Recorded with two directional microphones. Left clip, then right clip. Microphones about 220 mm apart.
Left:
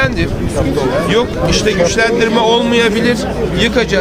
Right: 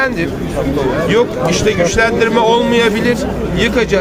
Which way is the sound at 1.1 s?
5° right (ahead or behind).